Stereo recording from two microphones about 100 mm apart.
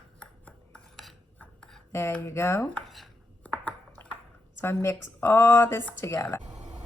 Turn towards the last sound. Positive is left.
turn(degrees=25)  # may be behind; listen again after turning